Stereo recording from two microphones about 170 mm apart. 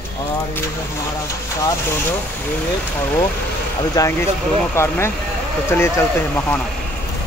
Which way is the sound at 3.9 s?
20° left (ahead or behind).